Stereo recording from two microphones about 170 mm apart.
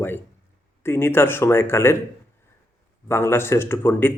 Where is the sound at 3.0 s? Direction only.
15° left (ahead or behind).